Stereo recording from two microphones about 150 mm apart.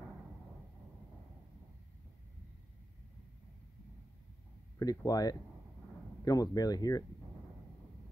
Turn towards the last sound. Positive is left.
turn(degrees=25)  # may be behind; listen again after turning